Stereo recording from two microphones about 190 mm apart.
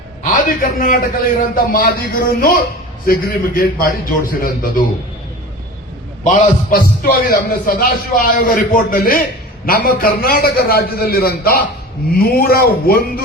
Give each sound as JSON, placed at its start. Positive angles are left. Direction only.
{"t": 0.2, "sound": "a man's voice", "side_deg": 45}
{"t": 6.2, "sound": "a man's voice", "side_deg": 50}